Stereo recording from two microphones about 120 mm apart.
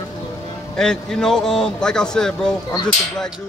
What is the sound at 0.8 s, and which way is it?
A man's voice, 5° left (ahead or behind).